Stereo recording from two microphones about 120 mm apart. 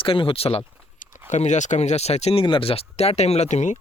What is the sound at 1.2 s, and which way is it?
Speech, 80° left.